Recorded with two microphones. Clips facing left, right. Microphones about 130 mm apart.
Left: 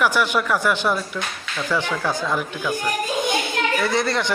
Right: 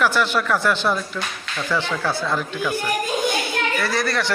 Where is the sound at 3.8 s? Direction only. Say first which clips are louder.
Left 2 dB; 20° left (ahead or behind).